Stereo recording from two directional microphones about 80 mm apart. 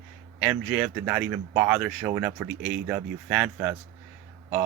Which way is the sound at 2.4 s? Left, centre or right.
Right.